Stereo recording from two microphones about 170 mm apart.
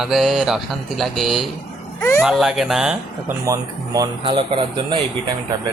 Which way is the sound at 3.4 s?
20° right (ahead or behind).